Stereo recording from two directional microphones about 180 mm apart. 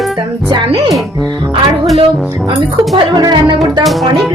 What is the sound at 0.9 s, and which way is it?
Speech, centre (ahead or behind).